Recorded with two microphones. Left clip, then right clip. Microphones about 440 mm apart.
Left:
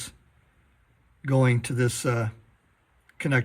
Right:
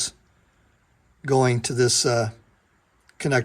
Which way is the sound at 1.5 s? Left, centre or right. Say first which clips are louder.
Right 6 dB; centre.